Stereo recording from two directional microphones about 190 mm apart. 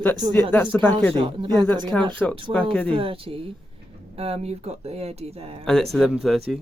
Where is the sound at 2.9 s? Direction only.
30° right (ahead or behind).